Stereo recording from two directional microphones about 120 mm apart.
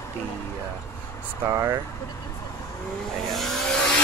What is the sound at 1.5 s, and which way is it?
Speech, 25° right (ahead or behind).